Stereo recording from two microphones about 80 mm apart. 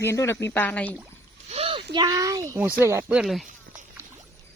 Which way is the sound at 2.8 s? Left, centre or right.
Right.